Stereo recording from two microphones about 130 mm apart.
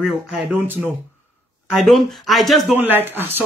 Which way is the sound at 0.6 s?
15° right (ahead or behind).